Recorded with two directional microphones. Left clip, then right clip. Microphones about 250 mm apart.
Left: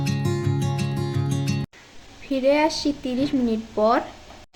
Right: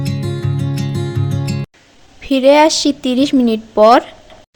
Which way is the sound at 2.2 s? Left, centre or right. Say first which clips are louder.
Right 11 dB; right.